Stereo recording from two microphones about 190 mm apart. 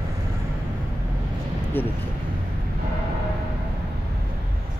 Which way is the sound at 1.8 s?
10° left (ahead or behind).